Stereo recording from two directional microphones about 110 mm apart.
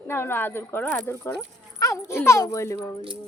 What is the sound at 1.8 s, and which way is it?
Speech, 30° left (ahead or behind).